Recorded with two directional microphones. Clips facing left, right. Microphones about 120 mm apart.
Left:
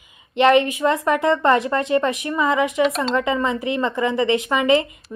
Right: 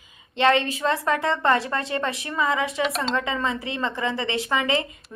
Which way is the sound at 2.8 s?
Centre (ahead or behind).